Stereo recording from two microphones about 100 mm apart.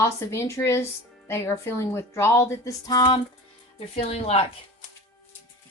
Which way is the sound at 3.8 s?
85° left.